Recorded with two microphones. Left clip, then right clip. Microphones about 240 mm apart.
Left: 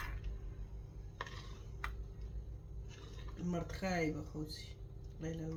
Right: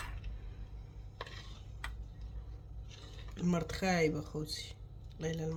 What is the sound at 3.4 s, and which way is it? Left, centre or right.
Speech, right.